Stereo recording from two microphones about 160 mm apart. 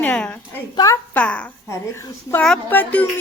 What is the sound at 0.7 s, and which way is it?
Speech, 20° left (ahead or behind).